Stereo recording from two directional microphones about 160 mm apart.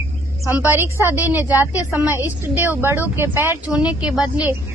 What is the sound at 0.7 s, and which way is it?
A woman's voice, 15° right (ahead or behind).